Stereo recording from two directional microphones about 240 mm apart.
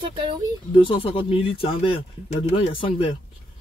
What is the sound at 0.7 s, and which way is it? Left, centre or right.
Speech, left.